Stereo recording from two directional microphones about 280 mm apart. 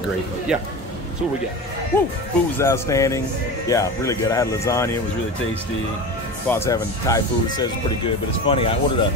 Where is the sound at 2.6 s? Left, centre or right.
Centre.